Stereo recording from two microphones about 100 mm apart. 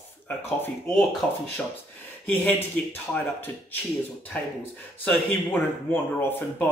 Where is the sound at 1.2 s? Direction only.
5° left (ahead or behind).